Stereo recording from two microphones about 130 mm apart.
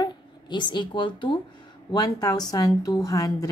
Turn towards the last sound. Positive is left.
turn(degrees=25)  # may be behind; listen again after turning